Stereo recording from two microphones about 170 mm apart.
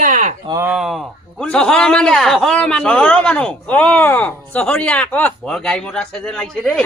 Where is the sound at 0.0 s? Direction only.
45° right (ahead or behind).